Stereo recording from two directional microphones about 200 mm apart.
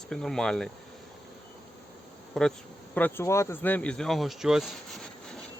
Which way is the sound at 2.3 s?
Centre (ahead or behind).